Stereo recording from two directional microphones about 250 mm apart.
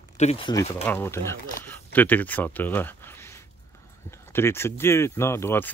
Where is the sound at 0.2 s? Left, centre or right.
Left.